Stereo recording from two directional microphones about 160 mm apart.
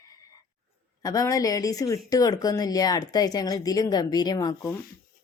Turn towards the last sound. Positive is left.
turn(degrees=20)  # may be behind; listen again after turning